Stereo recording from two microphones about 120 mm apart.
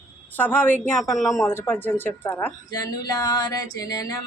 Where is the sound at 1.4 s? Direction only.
20° left (ahead or behind).